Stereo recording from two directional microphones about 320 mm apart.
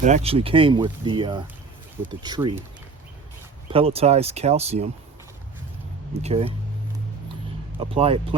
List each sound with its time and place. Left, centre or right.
0.0 s speech: right
3.7 s speech: centre
6.2 s speech: centre
7.8 s speech: centre